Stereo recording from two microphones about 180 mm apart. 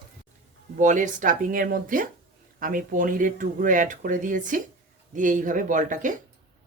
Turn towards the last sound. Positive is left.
turn(degrees=-45)  # may be behind; listen again after turning